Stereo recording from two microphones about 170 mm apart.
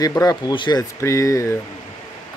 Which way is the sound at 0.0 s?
20° left (ahead or behind).